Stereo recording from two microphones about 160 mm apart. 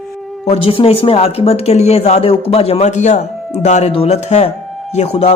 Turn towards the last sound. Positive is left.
turn(degrees=40)  # may be behind; listen again after turning